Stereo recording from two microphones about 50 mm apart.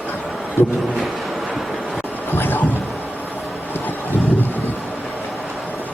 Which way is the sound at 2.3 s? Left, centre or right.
Left.